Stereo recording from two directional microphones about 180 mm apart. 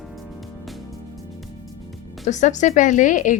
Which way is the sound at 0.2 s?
Centre (ahead or behind).